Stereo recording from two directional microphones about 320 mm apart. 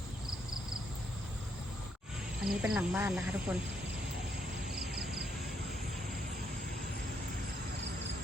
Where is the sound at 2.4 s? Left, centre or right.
Centre.